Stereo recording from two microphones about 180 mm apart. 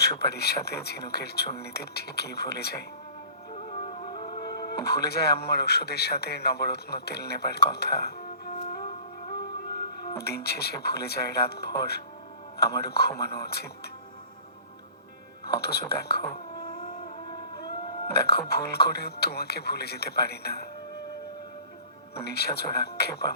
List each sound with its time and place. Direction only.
0.2 s speech: 65° left (ahead or behind)
3.5 s music: 40° left (ahead or behind)
4.4 s speech: 60° left (ahead or behind)
10.1 s speech: 60° left (ahead or behind)
15.4 s speech: 60° left (ahead or behind)
16.6 s a sound: 20° left (ahead or behind)
18.1 s speech: 60° left (ahead or behind)
22.1 s speech: 60° left (ahead or behind)